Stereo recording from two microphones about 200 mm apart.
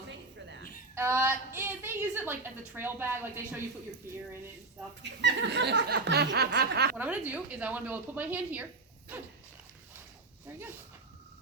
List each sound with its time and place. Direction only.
0.9 s a woman's voice: 10° right (ahead or behind)
5.2 s speech: 60° right (ahead or behind)
6.9 s a woman's voice: 10° right (ahead or behind)